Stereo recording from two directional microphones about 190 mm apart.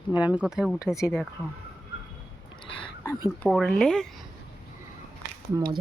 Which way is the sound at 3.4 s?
5° left (ahead or behind).